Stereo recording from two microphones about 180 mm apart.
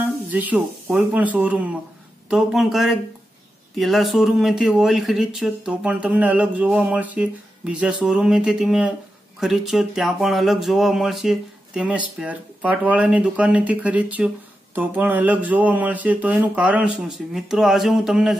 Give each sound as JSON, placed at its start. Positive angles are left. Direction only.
{"t": 0.0, "sound": "speech", "side_deg": -10}